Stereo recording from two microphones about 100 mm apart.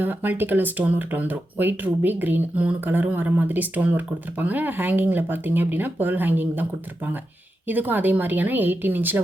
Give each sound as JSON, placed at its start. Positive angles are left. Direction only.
{"t": 0.0, "sound": "speech", "side_deg": -20}